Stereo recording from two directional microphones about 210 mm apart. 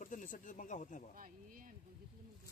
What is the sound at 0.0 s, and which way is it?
Speech, 40° left (ahead or behind).